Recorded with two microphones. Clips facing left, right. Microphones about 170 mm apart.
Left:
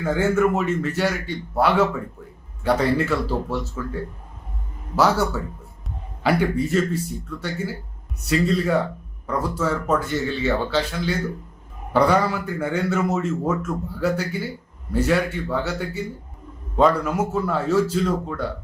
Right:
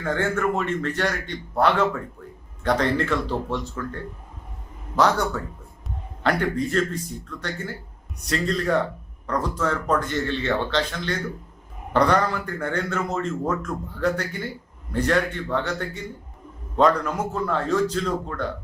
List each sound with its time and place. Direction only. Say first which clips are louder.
0.0 s a man's voice: left 4 dB; 5° left (ahead or behind)